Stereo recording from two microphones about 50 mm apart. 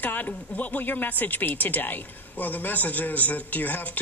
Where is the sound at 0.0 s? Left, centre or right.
Left.